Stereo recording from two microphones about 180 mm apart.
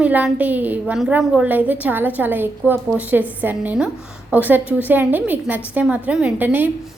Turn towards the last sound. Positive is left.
turn(degrees=-10)  # may be behind; listen again after turning